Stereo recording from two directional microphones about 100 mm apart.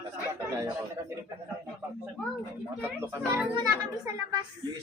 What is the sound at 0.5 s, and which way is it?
Speech, 30° right (ahead or behind).